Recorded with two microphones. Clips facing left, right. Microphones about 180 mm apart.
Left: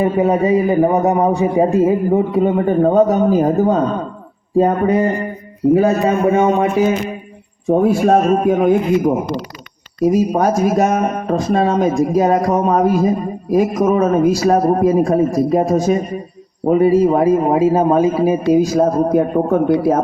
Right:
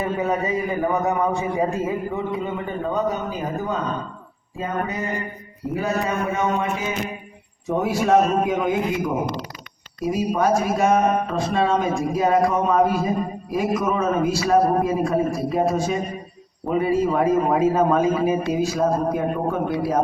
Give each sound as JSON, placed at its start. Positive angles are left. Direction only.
{"t": 0.0, "sound": "a man's voice", "side_deg": 30}
{"t": 5.7, "sound": "a man's voice", "side_deg": 50}
{"t": 6.3, "sound": "a man's voice", "side_deg": 30}
{"t": 7.8, "sound": "a man's voice", "side_deg": 50}